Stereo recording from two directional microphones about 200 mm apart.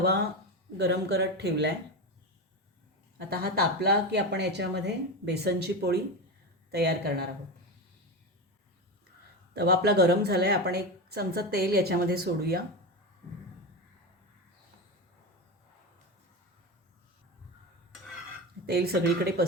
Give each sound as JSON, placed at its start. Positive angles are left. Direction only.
{"t": 0.8, "sound": "speech", "side_deg": -55}
{"t": 3.2, "sound": "a woman's voice", "side_deg": -50}
{"t": 9.6, "sound": "a woman's voice", "side_deg": -55}
{"t": 18.6, "sound": "a woman's voice", "side_deg": -50}